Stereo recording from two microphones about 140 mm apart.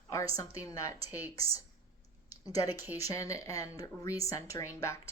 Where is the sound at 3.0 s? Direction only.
25° left (ahead or behind).